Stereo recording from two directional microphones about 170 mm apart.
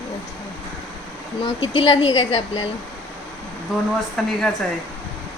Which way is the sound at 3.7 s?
Centre (ahead or behind).